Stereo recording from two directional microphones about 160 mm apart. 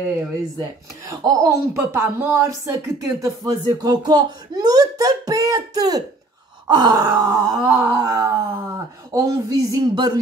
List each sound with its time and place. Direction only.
0.6 s groan: 20° right (ahead or behind)